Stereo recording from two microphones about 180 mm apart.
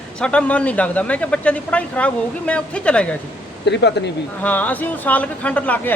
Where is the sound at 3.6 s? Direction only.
75° left (ahead or behind).